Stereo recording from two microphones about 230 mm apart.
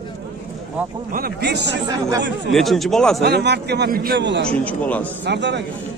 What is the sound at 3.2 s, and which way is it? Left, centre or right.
A man's voice, right.